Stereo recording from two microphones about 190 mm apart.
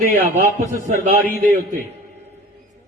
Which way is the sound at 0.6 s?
45° right (ahead or behind).